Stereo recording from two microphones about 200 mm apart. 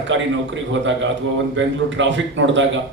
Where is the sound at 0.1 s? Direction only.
70° right (ahead or behind).